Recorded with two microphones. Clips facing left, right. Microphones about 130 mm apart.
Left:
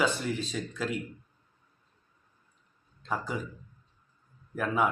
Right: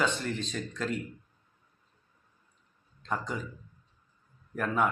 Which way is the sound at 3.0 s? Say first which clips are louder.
Left 1 dB; 5° left (ahead or behind).